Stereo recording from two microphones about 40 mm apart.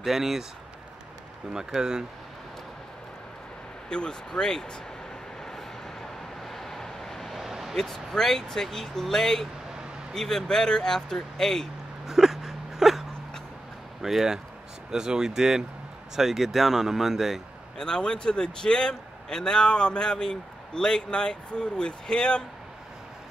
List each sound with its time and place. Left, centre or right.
0.0 s speech: centre
1.5 s speech: centre
3.9 s speech: centre
6.4 s vehicle: centre
7.3 s vehicle: centre
7.7 s speech: centre
12.1 s whimper: centre
14.0 s speech: centre
17.7 s a man's voice: centre